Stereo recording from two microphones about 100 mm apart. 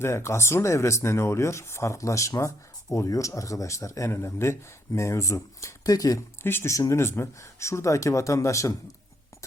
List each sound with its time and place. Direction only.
0.0 s speech: 25° left (ahead or behind)